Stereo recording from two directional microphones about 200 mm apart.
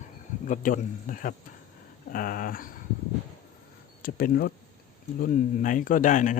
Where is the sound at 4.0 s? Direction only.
45° left (ahead or behind).